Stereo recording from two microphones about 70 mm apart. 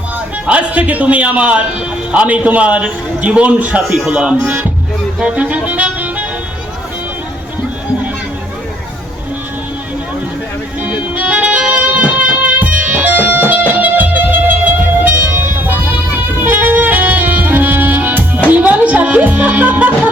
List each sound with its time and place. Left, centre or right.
0.4 s a man's voice: centre
3.8 s speech: centre
5.2 s music: centre
10.8 s music: right
15.0 s vehicle: right
16.4 s music: right